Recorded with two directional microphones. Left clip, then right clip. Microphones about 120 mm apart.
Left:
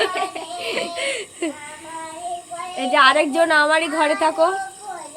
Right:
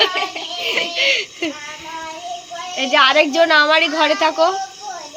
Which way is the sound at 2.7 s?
5° left (ahead or behind).